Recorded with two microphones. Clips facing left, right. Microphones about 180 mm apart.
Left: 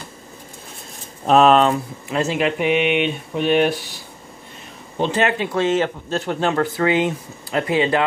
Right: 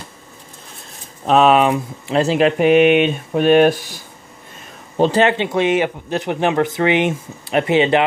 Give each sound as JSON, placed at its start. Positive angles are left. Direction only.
{"t": 1.2, "sound": "speech", "side_deg": 0}
{"t": 2.0, "sound": "speech", "side_deg": -30}
{"t": 4.9, "sound": "a man's voice", "side_deg": -35}